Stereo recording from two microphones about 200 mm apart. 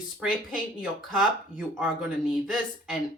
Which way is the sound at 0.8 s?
5° right (ahead or behind).